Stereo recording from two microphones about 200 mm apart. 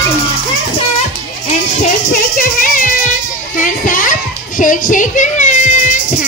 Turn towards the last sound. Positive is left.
turn(degrees=35)  # may be behind; listen again after turning